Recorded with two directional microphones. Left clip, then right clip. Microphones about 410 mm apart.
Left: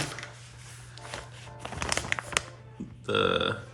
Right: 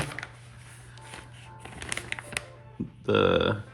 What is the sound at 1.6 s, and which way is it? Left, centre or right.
Music, centre.